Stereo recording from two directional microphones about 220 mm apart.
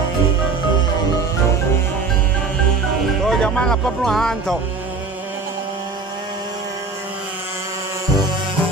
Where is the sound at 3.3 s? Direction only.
5° left (ahead or behind).